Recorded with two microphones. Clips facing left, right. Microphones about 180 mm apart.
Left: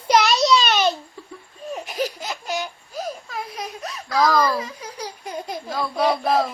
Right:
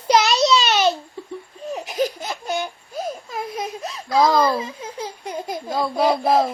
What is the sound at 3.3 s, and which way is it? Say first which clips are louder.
Baby cry: right 4 dB; 25° right (ahead or behind).